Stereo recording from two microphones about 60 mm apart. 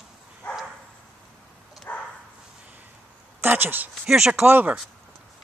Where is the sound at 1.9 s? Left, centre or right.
Left.